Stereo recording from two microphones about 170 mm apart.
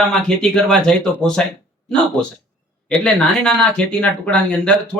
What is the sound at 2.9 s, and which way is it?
Speech, 5° left (ahead or behind).